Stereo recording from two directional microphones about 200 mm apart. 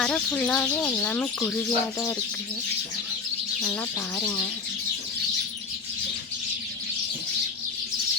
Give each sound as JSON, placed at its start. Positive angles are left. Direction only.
{"t": 0.0, "sound": "speech", "side_deg": 5}
{"t": 3.6, "sound": "speech", "side_deg": 10}